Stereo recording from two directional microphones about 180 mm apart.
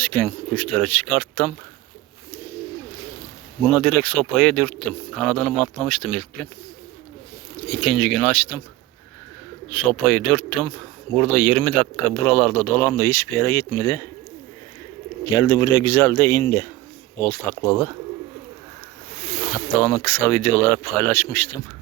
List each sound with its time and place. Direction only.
0.0 s speech: 10° left (ahead or behind)
3.6 s speech: 5° left (ahead or behind)
7.7 s speech: centre (ahead or behind)
9.6 s speech: 5° left (ahead or behind)
15.3 s speech: 20° left (ahead or behind)
17.5 s speech: 20° right (ahead or behind)
19.8 s speech: 10° left (ahead or behind)